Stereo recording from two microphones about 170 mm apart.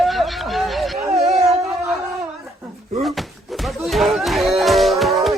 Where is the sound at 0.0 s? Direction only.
Centre (ahead or behind).